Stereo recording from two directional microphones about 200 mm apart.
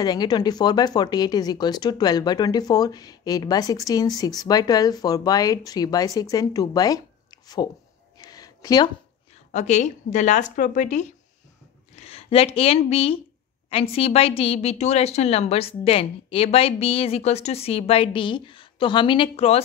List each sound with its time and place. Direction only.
0.0 s a woman's voice: 20° left (ahead or behind)
8.2 s a sound: 20° left (ahead or behind)
9.5 s a woman's voice: 35° left (ahead or behind)